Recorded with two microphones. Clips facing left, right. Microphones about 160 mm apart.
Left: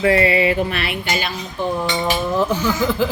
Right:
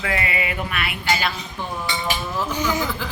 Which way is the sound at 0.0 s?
35° left (ahead or behind).